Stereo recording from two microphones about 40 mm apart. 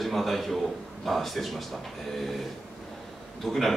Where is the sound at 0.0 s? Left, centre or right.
Centre.